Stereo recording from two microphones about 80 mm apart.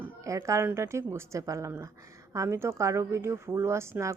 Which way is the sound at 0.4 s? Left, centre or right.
Right.